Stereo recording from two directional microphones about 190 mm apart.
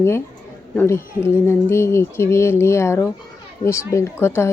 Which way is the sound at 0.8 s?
15° left (ahead or behind).